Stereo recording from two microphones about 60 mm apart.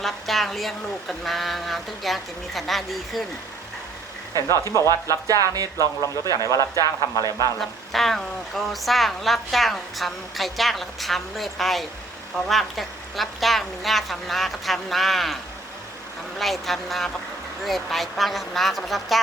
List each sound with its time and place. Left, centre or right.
0.0 s speech: centre
4.4 s a man's voice: left
7.9 s speech: centre
16.4 s speech: centre